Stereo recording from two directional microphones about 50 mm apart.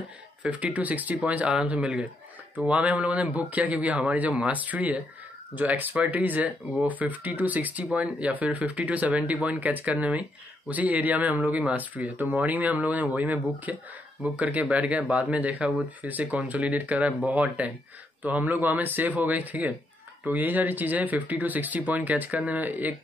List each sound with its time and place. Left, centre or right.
0.4 s speech: right